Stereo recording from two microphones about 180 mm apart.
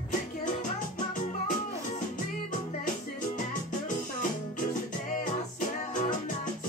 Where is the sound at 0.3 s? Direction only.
45° left (ahead or behind).